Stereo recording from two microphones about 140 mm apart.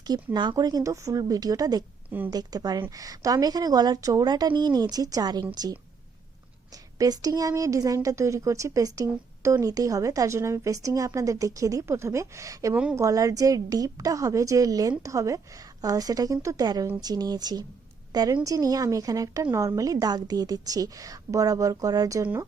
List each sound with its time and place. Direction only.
0.3 s a woman's voice: 30° right (ahead or behind)
2.0 s speech: 15° right (ahead or behind)
2.3 s a woman's voice: 30° right (ahead or behind)
7.0 s a woman's voice: 25° right (ahead or behind)
22.2 s a woman's voice: 15° right (ahead or behind)